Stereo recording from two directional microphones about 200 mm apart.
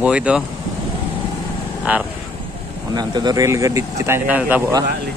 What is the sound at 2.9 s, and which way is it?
Speech, 20° right (ahead or behind).